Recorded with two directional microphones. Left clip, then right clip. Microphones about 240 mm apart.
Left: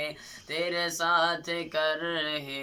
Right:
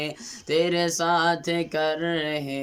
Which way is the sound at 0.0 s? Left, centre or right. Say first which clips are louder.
Right 3 dB; right.